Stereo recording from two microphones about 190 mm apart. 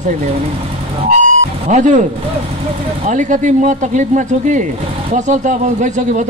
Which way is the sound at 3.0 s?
40° right (ahead or behind).